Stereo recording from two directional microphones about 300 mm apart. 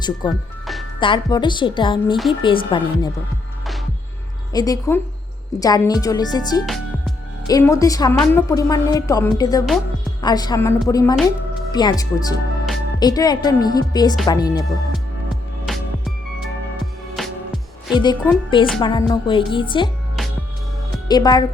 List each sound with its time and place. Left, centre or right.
0.0 s a woman's voice: centre
0.6 s music: centre
0.9 s a woman's voice: centre
4.5 s a woman's voice: centre
15.6 s music: centre
17.2 s music: centre
17.9 s a woman's voice: centre
21.1 s a woman's voice: centre